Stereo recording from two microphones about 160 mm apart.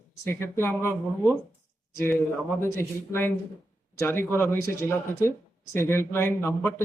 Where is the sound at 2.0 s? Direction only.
15° left (ahead or behind).